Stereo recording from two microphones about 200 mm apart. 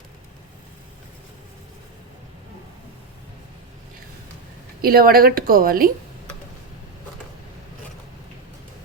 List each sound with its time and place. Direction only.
4.8 s a woman's voice: 50° right (ahead or behind)